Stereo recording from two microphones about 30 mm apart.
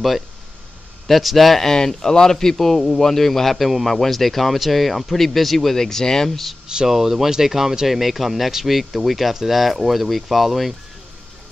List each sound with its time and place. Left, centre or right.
1.0 s a man's voice: centre
2.0 s a man's voice: centre
5.8 s speech: centre
6.9 s a man's voice: centre